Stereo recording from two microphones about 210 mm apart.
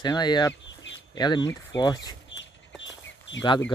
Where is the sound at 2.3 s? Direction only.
60° left (ahead or behind).